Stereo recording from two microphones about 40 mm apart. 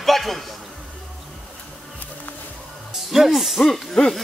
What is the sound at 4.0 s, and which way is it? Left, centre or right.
Hoot, left.